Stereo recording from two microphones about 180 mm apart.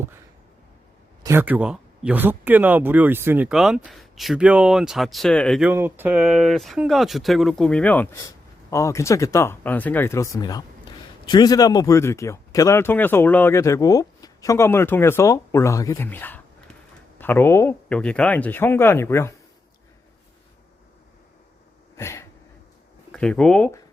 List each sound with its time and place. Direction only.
1.2 s speech: 15° right (ahead or behind); by 5.6 s 5° left (ahead or behind)
5.6 s speech: 10° right (ahead or behind); by 19.3 s 15° left (ahead or behind)
21.9 s a sound: 15° left (ahead or behind)
23.1 s speech: 5° left (ahead or behind)